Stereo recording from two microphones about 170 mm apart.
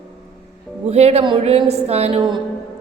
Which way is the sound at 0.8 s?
40° right (ahead or behind).